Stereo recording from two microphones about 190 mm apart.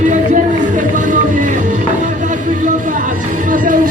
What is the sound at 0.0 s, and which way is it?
Music, 40° right (ahead or behind).